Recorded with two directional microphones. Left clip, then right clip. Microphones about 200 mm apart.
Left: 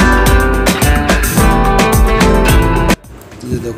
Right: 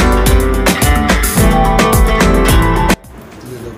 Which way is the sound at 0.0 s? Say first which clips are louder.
Left 2 dB; centre (ahead or behind).